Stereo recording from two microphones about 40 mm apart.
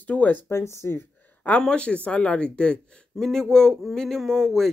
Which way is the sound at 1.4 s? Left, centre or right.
Left.